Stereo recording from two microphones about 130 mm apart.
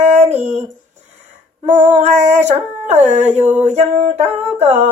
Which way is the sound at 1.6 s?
65° right (ahead or behind).